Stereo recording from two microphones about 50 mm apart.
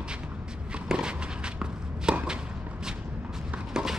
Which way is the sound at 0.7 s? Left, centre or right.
Centre.